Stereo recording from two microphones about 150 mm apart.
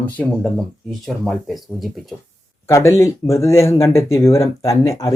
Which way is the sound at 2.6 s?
20° left (ahead or behind).